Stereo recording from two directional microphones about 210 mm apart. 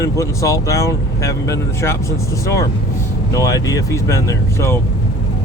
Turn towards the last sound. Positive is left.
turn(degrees=15)  # may be behind; listen again after turning